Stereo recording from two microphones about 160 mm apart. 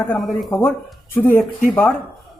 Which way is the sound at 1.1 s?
15° left (ahead or behind).